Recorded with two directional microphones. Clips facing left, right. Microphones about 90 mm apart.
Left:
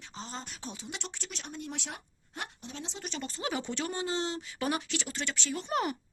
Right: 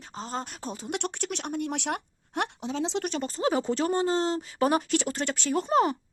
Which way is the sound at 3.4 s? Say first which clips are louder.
Right 9 dB; 35° right (ahead or behind).